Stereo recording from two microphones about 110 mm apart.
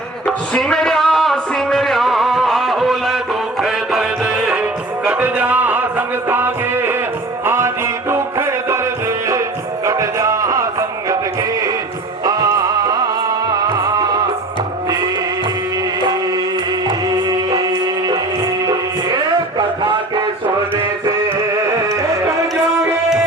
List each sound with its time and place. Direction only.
0.3 s a sound: 5° left (ahead or behind)
3.6 s music: 5° right (ahead or behind); by 11.2 s 30° right (ahead or behind)
12.2 s music: 35° right (ahead or behind)
16.8 s music: 40° right (ahead or behind)
21.8 s music: 30° right (ahead or behind)